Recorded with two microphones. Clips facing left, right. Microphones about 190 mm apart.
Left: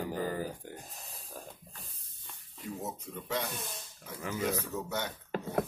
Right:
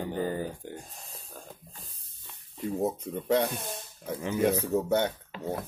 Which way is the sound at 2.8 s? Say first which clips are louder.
Right 14 dB; 55° right (ahead or behind).